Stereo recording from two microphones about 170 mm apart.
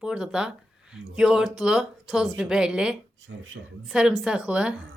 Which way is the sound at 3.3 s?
90° right.